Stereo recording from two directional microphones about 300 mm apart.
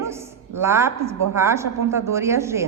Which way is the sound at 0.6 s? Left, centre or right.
Centre.